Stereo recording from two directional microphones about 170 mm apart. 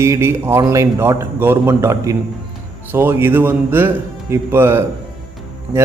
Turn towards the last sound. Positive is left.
turn(degrees=0)  # may be behind; listen again after turning